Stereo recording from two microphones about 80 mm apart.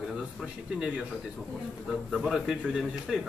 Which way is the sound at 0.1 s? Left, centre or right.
Centre.